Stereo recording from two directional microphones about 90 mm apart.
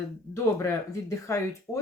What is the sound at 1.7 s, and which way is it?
Speech, centre (ahead or behind).